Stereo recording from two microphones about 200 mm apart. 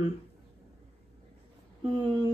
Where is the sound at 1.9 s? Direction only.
20° right (ahead or behind).